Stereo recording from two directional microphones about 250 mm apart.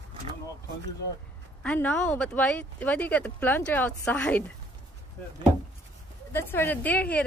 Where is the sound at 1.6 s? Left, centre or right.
Centre.